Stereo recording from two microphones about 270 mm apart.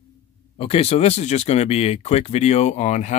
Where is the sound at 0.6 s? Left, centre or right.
Left.